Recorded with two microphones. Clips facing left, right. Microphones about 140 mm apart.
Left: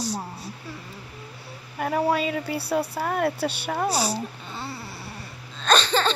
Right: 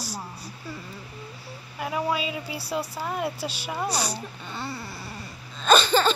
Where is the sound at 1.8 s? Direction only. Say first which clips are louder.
Left 4 dB; 55° left (ahead or behind).